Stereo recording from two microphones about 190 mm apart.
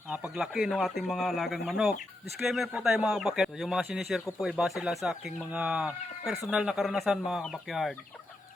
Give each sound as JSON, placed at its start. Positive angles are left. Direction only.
{"t": 0.1, "sound": "speech", "side_deg": -5}